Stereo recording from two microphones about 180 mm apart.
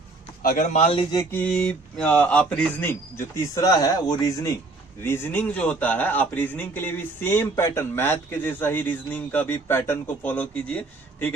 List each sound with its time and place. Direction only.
0.4 s speech: 45° left (ahead or behind)
1.1 s a man's voice: 15° left (ahead or behind)